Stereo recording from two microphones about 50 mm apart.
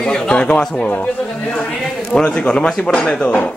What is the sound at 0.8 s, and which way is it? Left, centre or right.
Speech, left.